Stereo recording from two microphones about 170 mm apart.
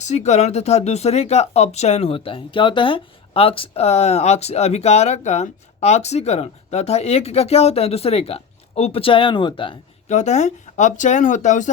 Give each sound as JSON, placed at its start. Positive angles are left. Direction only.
{"t": 0.0, "sound": "speech", "side_deg": 40}
{"t": 10.1, "sound": "speech", "side_deg": 45}